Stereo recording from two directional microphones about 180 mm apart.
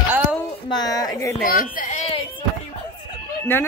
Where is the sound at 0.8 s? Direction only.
20° left (ahead or behind).